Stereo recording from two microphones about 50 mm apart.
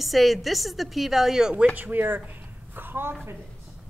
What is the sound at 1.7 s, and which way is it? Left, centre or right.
Speech, right.